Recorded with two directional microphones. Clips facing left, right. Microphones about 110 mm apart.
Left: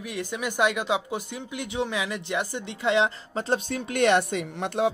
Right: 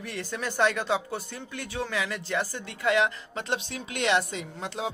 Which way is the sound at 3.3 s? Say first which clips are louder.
Left 5 dB; 40° left (ahead or behind).